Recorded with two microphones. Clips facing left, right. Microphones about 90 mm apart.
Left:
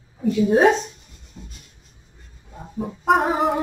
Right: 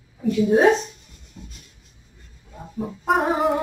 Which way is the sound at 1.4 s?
25° left (ahead or behind).